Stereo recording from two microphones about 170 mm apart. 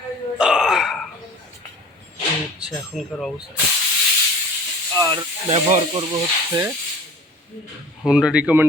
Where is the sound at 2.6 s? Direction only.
5° right (ahead or behind).